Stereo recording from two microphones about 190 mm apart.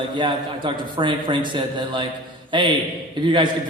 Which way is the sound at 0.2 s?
25° right (ahead or behind).